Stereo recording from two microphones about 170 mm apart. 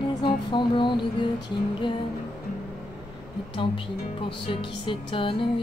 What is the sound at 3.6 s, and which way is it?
Music, 30° left (ahead or behind).